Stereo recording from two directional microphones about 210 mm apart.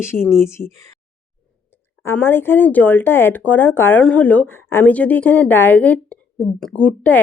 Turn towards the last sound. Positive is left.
turn(degrees=5)  # may be behind; listen again after turning